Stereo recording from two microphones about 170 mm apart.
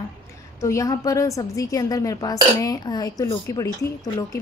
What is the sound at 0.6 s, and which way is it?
A woman's voice, 20° left (ahead or behind).